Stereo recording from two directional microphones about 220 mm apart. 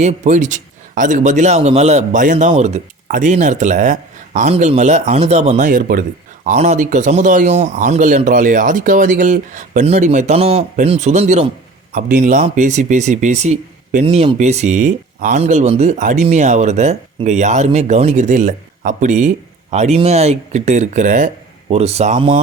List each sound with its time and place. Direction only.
0.0 s a man's voice: 30° right (ahead or behind)